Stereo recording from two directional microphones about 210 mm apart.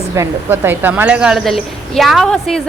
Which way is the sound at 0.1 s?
10° right (ahead or behind).